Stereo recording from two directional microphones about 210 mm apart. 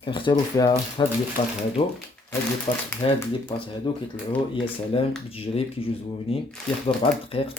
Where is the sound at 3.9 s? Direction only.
20° left (ahead or behind).